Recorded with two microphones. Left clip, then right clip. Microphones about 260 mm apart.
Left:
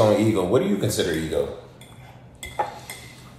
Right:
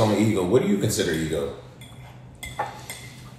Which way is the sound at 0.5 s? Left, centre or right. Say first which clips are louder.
Even; centre.